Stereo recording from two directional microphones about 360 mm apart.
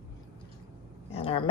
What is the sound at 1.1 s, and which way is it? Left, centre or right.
Dog, centre.